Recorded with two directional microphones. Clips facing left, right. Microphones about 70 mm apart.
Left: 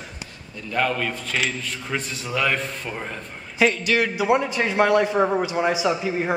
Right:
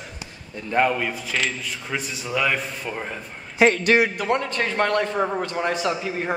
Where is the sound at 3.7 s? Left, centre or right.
Right.